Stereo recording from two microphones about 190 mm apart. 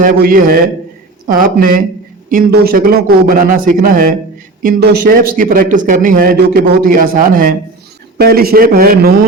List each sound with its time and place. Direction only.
0.0 s a man's voice: 45° right (ahead or behind)